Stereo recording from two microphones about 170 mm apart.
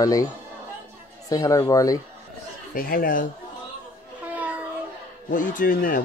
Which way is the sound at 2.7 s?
60° left (ahead or behind).